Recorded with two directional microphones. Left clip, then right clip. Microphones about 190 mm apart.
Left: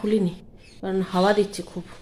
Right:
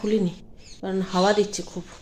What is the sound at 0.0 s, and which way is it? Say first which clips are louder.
Speech: left 1 dB; centre (ahead or behind).